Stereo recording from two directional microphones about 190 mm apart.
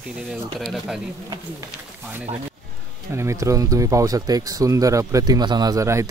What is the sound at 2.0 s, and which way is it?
Speech, 10° right (ahead or behind).